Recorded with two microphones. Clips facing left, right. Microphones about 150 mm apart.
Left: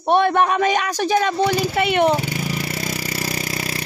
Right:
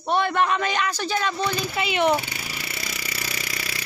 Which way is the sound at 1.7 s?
55° left (ahead or behind).